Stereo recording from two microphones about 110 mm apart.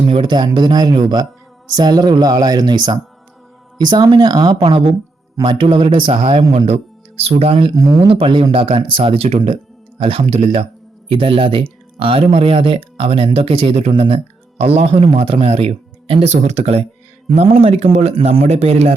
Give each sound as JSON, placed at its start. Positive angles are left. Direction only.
{"t": 0.1, "sound": "speech", "side_deg": -45}
{"t": 17.2, "sound": "a man's voice", "side_deg": -65}